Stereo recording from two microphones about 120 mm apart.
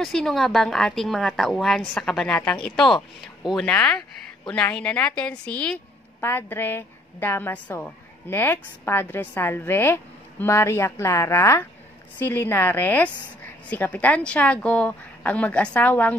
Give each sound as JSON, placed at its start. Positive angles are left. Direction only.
{"t": 0.0, "sound": "a woman's voice", "side_deg": 0}